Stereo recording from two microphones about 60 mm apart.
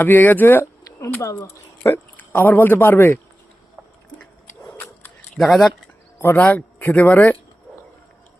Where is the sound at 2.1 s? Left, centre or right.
Left.